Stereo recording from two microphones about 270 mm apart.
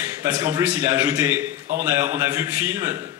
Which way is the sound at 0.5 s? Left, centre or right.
Centre.